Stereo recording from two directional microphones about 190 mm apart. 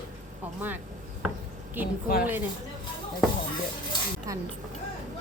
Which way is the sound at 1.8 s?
10° right (ahead or behind).